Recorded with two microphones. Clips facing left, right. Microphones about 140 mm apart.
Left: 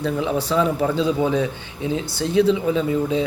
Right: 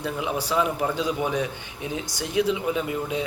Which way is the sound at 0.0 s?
10° right (ahead or behind).